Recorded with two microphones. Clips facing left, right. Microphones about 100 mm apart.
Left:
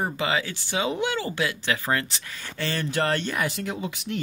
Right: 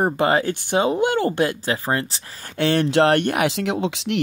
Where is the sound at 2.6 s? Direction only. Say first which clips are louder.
Right 9 dB; 65° right (ahead or behind); by 4.2 s 90° right.